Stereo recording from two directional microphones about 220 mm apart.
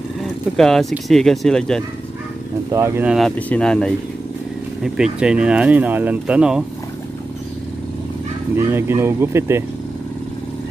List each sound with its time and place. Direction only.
0.2 s speech: centre (ahead or behind)
2.7 s speech: 10° right (ahead or behind)
8.5 s speech: 10° right (ahead or behind)